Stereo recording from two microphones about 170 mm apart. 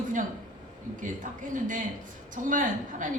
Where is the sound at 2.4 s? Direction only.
50° right (ahead or behind).